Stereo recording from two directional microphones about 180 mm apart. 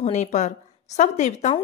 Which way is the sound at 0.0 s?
40° left (ahead or behind).